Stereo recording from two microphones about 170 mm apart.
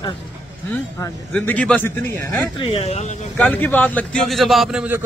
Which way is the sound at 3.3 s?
10° left (ahead or behind).